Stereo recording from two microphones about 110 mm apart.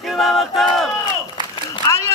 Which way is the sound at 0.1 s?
Centre (ahead or behind).